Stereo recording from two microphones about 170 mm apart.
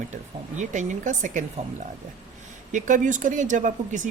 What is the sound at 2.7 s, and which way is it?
Speech, 45° right (ahead or behind).